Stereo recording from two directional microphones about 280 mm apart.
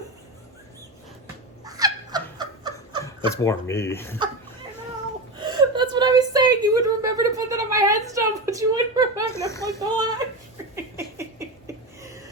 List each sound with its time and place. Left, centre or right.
1.6 s a sound: centre
3.0 s speech: centre
5.4 s whimper: centre
9.5 s a child's voice: centre
9.8 s speech: centre
10.9 s a sound: centre